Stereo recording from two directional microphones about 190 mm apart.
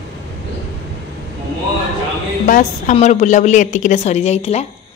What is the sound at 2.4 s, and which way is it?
A woman's voice, 45° left (ahead or behind).